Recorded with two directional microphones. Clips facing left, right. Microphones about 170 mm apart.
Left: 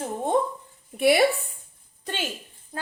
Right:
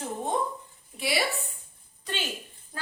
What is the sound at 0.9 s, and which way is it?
Speech, 55° left (ahead or behind).